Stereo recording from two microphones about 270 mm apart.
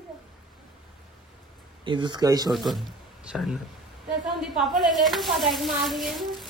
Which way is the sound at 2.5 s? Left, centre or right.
Centre.